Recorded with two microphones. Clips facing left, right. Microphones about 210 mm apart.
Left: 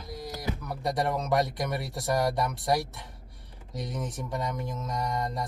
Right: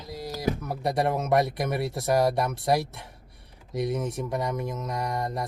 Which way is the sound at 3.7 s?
25° right (ahead or behind).